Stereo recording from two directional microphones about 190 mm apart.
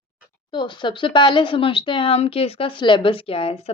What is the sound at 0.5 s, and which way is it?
Speech, 25° left (ahead or behind).